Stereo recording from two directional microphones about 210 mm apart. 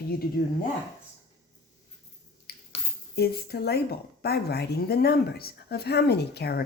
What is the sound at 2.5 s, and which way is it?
Finger snapping, 50° left (ahead or behind).